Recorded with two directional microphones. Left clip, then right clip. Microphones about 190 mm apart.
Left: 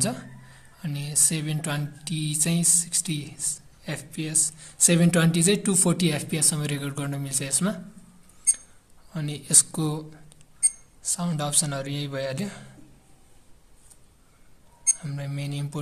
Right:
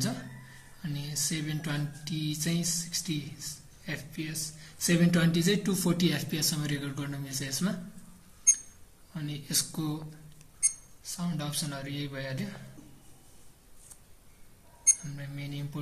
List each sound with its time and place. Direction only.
0.7 s speech: 50° left (ahead or behind)
9.1 s speech: 55° left (ahead or behind)
11.1 s speech: 60° left (ahead or behind)
15.0 s speech: 55° left (ahead or behind)